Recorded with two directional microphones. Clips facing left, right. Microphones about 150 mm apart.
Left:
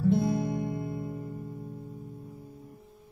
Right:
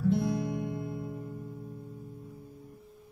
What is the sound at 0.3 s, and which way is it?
Music, 25° left (ahead or behind).